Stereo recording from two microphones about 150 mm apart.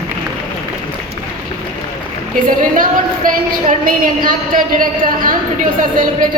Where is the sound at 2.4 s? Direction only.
65° right (ahead or behind).